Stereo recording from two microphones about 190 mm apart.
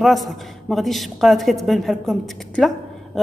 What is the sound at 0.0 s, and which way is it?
A woman's voice, centre (ahead or behind).